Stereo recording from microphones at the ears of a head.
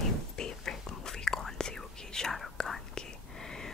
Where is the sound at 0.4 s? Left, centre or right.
Left.